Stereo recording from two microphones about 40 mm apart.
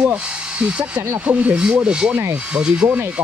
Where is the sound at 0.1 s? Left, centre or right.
Right.